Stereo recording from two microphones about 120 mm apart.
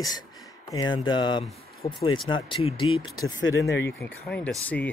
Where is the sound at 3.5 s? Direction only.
25° left (ahead or behind).